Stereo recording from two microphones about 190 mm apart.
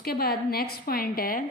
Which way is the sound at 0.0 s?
55° left (ahead or behind).